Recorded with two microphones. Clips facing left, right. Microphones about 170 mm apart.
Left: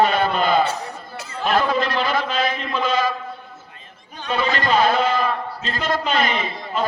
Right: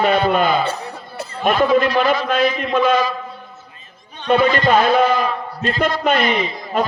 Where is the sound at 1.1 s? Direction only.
55° right (ahead or behind).